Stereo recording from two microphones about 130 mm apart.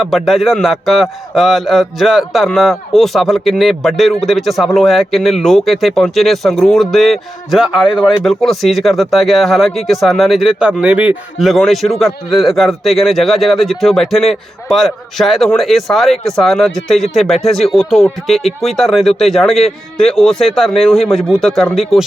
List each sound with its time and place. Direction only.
0.0 s a man's voice: centre (ahead or behind)